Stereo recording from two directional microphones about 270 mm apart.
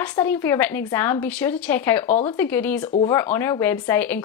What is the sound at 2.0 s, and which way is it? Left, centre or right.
Speech, left.